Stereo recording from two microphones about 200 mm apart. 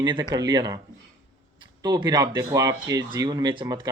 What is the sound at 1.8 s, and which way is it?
Speech, 20° right (ahead or behind).